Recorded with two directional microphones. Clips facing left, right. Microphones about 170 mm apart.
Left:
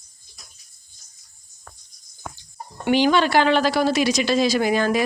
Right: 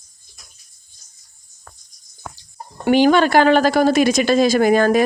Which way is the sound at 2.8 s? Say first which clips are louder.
Right 5 dB; 50° right (ahead or behind).